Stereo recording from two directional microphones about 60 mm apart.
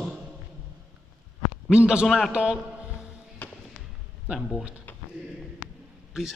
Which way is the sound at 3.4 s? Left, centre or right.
Left.